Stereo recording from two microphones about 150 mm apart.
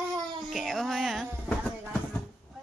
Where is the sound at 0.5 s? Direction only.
Centre (ahead or behind).